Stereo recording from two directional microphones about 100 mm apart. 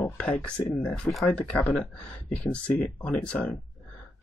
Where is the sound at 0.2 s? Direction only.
15° left (ahead or behind).